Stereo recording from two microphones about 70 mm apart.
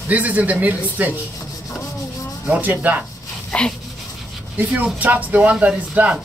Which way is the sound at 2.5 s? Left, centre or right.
Right.